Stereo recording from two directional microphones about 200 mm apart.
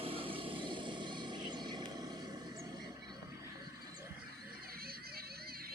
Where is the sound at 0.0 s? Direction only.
30° right (ahead or behind).